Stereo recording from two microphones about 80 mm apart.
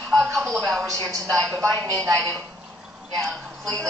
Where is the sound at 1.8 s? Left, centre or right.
Right.